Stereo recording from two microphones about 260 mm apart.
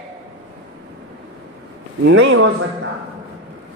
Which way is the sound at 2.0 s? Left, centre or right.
Right.